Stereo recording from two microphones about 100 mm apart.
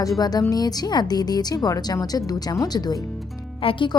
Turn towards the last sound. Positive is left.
turn(degrees=60)  # may be behind; listen again after turning